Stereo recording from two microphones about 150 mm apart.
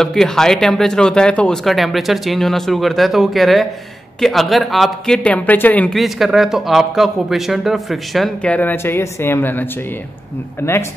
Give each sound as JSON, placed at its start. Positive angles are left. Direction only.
{"t": 0.0, "sound": "speech", "side_deg": 5}